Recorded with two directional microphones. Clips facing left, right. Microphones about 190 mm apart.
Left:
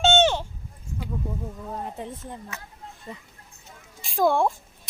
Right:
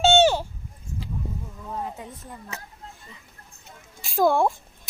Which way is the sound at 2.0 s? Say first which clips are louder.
Left 4 dB; 30° left (ahead or behind).